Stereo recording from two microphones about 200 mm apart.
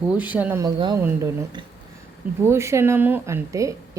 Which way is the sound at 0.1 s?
5° right (ahead or behind).